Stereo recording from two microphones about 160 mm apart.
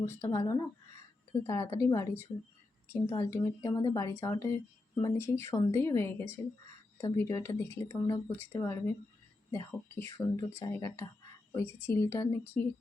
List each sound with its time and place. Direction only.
0.0 s a woman's voice: 20° left (ahead or behind)